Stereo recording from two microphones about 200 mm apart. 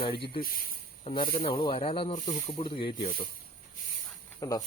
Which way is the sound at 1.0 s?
25° left (ahead or behind).